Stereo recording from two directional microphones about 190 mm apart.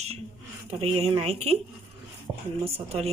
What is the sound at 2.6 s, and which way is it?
Speech, 30° right (ahead or behind).